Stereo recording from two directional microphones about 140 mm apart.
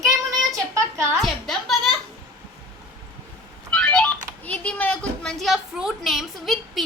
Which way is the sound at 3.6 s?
5° left (ahead or behind).